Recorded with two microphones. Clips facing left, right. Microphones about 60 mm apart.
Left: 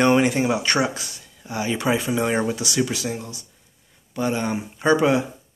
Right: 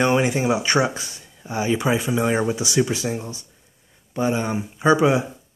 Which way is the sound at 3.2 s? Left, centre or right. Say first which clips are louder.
Right 2 dB; right.